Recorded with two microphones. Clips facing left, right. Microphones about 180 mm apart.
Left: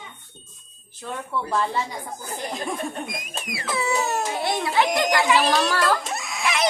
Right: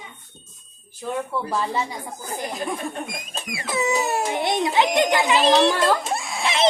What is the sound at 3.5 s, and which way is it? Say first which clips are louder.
A child's voice: right 2 dB; 20° right (ahead or behind).